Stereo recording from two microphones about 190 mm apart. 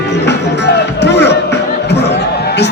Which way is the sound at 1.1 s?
65° left (ahead or behind).